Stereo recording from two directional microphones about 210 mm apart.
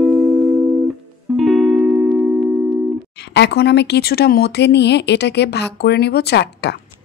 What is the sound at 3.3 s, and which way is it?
Speech, 55° left (ahead or behind).